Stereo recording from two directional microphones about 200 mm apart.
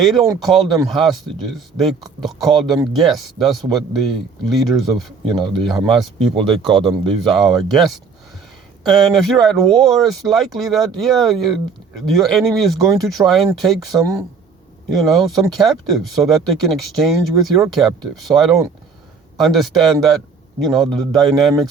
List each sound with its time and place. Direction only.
0.0 s speech: centre (ahead or behind)
5.7 s speech: 25° right (ahead or behind)
7.2 s speech: centre (ahead or behind)